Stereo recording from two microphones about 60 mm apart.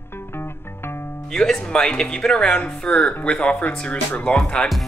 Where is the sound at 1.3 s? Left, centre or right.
Centre.